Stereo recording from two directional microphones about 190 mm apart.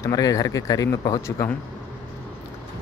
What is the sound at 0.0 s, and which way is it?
Speech, 20° left (ahead or behind).